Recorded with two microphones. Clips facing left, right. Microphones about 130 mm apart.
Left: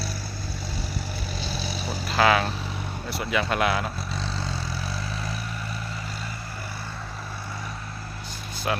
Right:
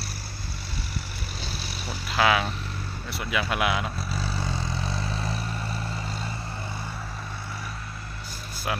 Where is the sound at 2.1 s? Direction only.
5° right (ahead or behind).